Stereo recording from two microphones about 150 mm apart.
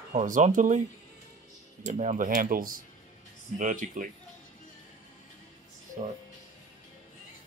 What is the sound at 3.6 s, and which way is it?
Speech, 60° right (ahead or behind).